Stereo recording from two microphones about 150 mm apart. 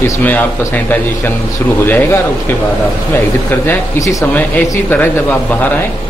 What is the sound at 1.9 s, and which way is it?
Speech, 15° left (ahead or behind).